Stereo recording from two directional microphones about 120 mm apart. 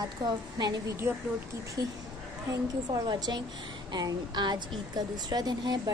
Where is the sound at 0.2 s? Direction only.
35° right (ahead or behind).